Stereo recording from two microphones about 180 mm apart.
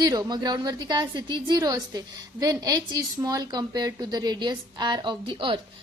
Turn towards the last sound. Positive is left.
turn(degrees=-25)  # may be behind; listen again after turning